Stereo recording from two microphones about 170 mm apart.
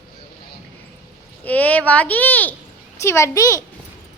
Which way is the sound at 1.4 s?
10° left (ahead or behind).